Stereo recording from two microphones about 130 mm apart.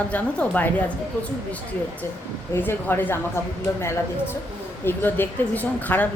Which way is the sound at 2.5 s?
15° left (ahead or behind).